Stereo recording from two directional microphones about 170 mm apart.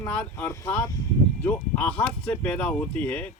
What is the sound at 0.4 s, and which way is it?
Speech, 20° left (ahead or behind).